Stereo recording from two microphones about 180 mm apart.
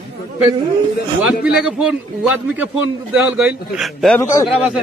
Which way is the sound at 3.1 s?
5° right (ahead or behind).